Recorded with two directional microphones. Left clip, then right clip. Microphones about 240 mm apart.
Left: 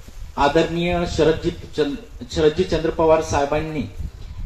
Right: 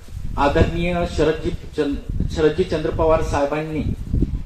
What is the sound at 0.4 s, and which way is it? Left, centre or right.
Speech, left.